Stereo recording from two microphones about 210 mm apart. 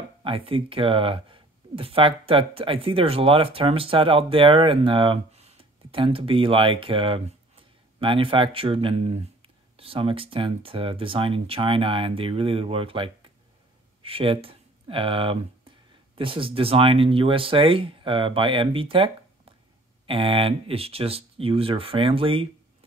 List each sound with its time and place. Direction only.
0.2 s speech: 25° right (ahead or behind)